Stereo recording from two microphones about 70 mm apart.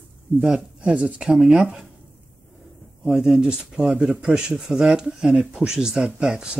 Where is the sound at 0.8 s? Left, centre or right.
Centre.